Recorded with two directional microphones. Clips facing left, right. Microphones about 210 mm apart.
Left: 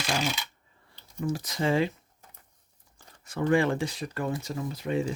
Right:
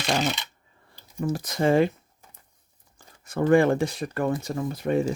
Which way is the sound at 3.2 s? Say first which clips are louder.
Right 5 dB; 50° right (ahead or behind).